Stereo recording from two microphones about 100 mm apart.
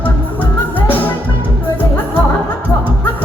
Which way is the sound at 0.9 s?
15° left (ahead or behind).